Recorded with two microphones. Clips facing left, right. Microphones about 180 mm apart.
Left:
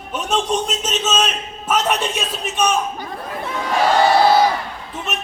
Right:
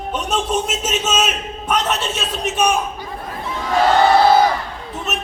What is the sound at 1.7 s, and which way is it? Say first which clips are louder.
Speech: left 1 dB; 10° left (ahead or behind).